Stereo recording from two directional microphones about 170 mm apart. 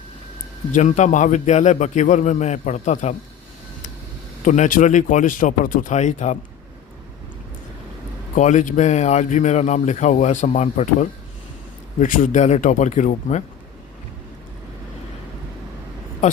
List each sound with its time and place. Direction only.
0.7 s speech: 45° left (ahead or behind)
4.4 s speech: 50° left (ahead or behind)
8.4 s speech: 45° left (ahead or behind)